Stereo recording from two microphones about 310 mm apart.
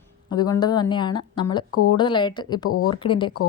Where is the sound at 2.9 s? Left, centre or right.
Centre.